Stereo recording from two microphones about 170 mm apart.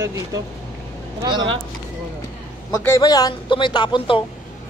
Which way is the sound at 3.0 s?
25° left (ahead or behind).